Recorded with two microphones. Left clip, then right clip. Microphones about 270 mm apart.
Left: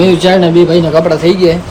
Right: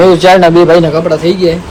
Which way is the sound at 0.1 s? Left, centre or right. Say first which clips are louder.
Right 4 dB; centre.